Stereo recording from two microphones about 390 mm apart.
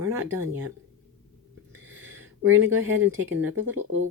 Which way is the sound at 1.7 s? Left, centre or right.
Centre.